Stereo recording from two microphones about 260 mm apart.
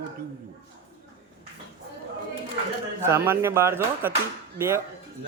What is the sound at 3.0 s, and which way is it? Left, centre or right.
Speech, centre.